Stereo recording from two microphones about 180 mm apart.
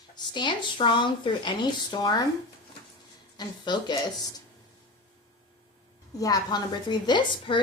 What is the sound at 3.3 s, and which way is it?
Speech, 25° left (ahead or behind).